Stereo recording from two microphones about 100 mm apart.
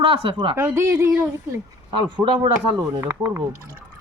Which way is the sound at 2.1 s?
55° right (ahead or behind).